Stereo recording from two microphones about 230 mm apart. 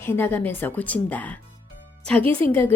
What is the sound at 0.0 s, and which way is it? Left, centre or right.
A woman's voice, centre.